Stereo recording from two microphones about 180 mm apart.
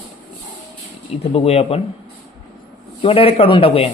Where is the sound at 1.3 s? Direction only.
35° left (ahead or behind).